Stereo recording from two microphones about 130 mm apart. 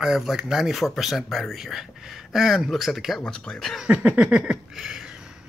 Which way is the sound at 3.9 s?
10° right (ahead or behind).